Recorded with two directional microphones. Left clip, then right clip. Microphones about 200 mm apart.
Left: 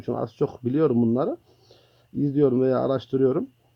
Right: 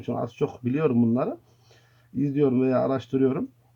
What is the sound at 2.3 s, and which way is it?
Speech, 35° left (ahead or behind).